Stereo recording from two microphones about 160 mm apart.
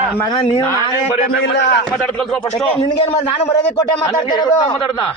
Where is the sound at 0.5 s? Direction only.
20° left (ahead or behind).